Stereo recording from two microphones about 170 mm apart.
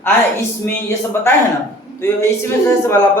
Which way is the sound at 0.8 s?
15° left (ahead or behind).